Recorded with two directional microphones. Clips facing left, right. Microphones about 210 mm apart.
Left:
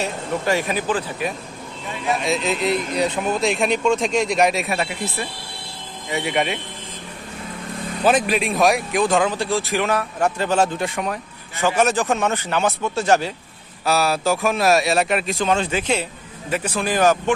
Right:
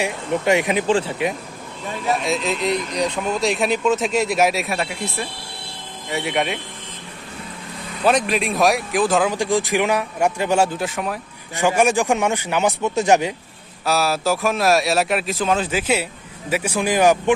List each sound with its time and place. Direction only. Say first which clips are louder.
0.0 s speech: right 2 dB; 20° right (ahead or behind)
2.2 s speech: even; centre (ahead or behind)
8.0 s speech: even; centre (ahead or behind)
9.3 s a man's voice: right 2 dB; 15° right (ahead or behind)
13.8 s a man's voice: even; centre (ahead or behind)